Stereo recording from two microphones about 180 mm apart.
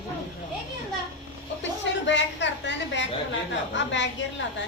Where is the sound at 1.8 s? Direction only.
85° left.